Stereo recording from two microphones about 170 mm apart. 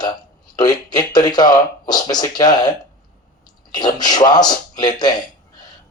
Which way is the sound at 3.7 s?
25° left (ahead or behind).